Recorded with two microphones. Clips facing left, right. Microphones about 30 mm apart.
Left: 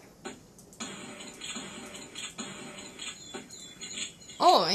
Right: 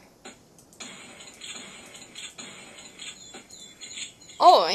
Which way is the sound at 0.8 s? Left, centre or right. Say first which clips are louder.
Left 2 dB; centre.